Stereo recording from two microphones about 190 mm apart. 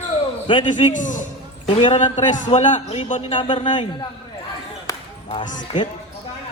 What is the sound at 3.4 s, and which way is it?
Speech, 25° left (ahead or behind).